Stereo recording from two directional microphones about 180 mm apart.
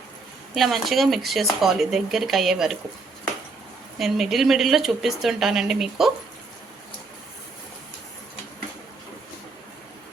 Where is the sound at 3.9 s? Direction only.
Centre (ahead or behind).